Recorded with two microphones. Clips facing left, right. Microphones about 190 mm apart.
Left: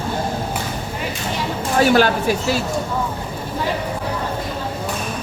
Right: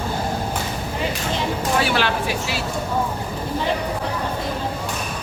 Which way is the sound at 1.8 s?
45° left (ahead or behind).